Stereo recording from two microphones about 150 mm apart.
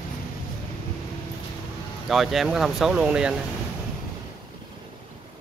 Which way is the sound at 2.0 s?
Centre (ahead or behind).